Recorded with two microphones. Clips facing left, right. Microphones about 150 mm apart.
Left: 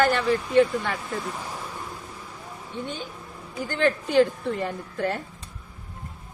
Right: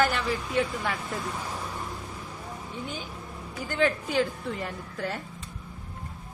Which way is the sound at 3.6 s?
5° right (ahead or behind).